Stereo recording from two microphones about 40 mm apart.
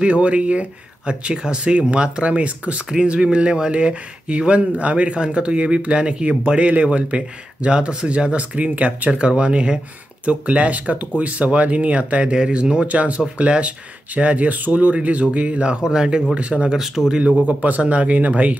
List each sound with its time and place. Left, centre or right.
0.0 s speech: right
2.9 s speech: right
12.8 s speech: right; by 16.3 s centre
16.3 s speech: right
16.7 s speech: centre
17.5 s speech: right